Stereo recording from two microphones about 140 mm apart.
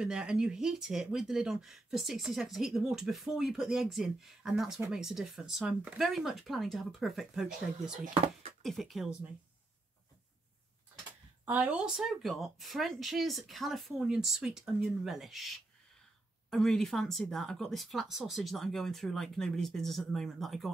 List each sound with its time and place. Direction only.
0.0 s speech: 5° right (ahead or behind)
8.0 s speech: 50° right (ahead or behind)
8.6 s speech: centre (ahead or behind)
11.4 s speech: 10° right (ahead or behind)